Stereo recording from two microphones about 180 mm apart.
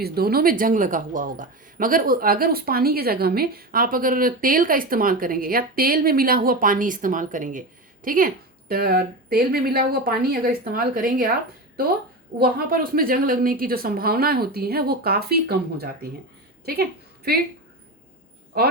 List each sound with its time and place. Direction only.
0.0 s a man's voice: 60° right (ahead or behind)
12.4 s a woman's voice: 55° right (ahead or behind)